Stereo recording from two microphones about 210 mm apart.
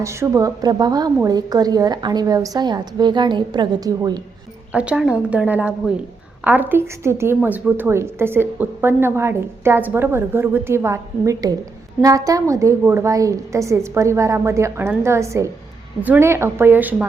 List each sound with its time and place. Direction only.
0.0 s a woman's voice: 15° right (ahead or behind)
4.7 s a woman's voice: 5° right (ahead or behind)